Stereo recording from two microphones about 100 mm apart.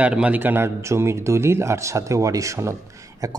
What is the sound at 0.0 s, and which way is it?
Speech, 15° right (ahead or behind).